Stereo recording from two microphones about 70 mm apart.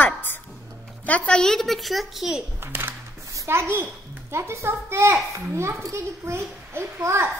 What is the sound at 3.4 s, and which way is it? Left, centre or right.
A child's voice, right.